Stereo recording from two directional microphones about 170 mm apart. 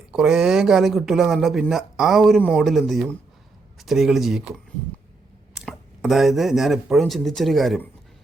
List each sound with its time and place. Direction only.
0.1 s speech: 5° right (ahead or behind)
5.5 s speech: centre (ahead or behind)